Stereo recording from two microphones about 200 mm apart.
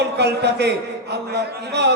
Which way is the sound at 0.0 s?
55° right (ahead or behind).